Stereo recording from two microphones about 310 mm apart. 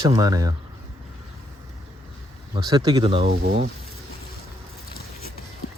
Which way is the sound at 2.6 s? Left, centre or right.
Centre.